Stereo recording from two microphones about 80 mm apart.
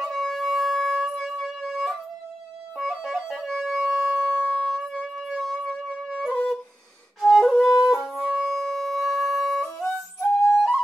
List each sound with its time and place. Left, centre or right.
0.0 s wind instrument: centre
2.8 s music: centre
4.4 s music: centre
4.6 s music: centre
7.2 s flute: centre
7.8 s music: centre
8.5 s music: centre